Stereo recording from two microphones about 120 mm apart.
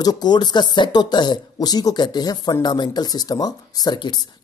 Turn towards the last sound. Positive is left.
turn(degrees=40)  # may be behind; listen again after turning